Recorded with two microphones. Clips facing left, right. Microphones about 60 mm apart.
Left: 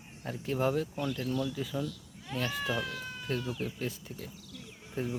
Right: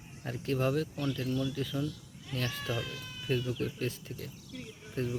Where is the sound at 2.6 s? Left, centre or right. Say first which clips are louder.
Left 3 dB; left.